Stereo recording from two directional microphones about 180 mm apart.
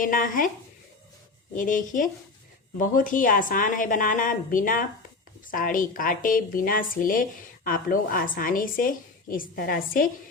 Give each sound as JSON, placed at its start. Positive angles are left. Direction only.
{"t": 0.0, "sound": "a woman's voice", "side_deg": 50}
{"t": 1.5, "sound": "a woman's voice", "side_deg": 45}